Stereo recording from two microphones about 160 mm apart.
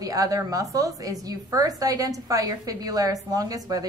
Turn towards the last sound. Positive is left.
turn(degrees=-25)  # may be behind; listen again after turning